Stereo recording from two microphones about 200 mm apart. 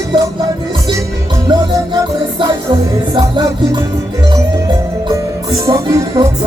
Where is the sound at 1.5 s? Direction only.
20° right (ahead or behind).